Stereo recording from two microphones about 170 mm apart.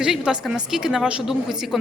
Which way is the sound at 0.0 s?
5° right (ahead or behind).